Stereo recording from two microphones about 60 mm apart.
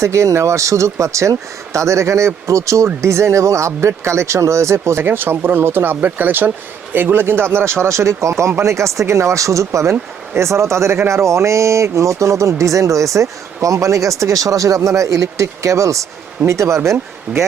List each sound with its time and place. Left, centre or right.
0.0 s speech: right
5.0 s speech: right
7.9 s speech: right